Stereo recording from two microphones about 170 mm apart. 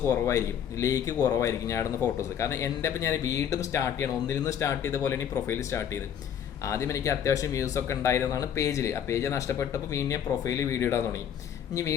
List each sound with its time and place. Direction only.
0.0 s speech: 15° left (ahead or behind)
6.7 s speech: 15° left (ahead or behind)